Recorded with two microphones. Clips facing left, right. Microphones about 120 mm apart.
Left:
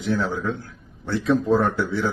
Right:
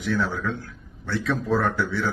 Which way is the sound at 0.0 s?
25° left (ahead or behind).